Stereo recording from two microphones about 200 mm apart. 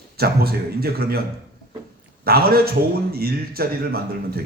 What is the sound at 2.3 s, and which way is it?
Speech, 50° right (ahead or behind).